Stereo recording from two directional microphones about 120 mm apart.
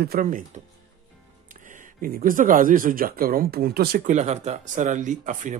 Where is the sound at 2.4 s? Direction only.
90° right.